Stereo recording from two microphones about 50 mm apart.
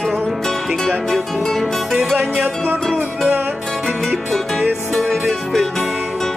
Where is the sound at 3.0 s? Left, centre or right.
Right.